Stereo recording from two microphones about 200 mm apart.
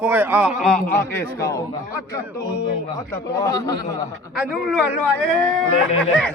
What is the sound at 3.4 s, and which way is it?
Speech, 20° left (ahead or behind).